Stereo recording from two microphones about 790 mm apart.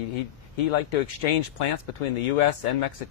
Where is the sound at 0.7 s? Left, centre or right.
Left.